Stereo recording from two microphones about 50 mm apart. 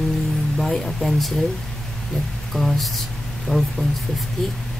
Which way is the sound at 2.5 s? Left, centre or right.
Centre.